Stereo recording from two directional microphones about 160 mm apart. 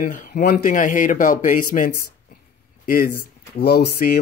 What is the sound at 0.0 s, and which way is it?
Speech, 55° left (ahead or behind).